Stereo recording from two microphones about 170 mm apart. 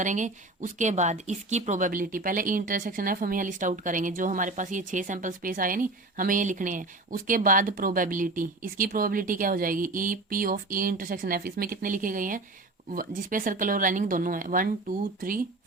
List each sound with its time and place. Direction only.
0.0 s speech: 45° right (ahead or behind)